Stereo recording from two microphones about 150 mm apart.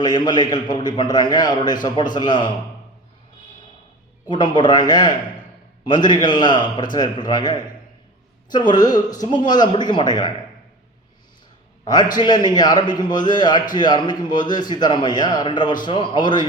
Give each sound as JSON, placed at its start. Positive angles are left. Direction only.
{"t": 0.0, "sound": "a man's voice", "side_deg": 30}
{"t": 4.3, "sound": "a man's voice", "side_deg": 30}
{"t": 12.1, "sound": "a man's voice", "side_deg": 30}